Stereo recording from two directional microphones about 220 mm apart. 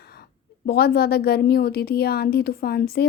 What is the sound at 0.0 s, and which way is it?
A woman's voice, 45° left (ahead or behind).